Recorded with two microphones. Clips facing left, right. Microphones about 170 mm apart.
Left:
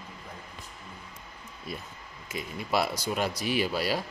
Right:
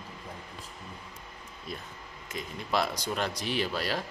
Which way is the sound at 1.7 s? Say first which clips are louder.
Left 1 dB; 10° left (ahead or behind).